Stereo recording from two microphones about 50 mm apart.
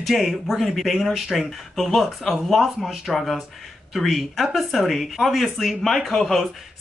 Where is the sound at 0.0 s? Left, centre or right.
Centre.